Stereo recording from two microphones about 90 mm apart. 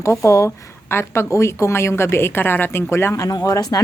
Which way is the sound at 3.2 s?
40° left (ahead or behind).